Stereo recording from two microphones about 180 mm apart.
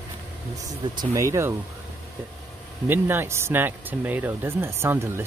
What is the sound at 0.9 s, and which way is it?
Speech, 15° right (ahead or behind).